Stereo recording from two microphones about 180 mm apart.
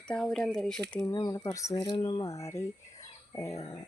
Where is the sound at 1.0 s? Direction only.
20° left (ahead or behind).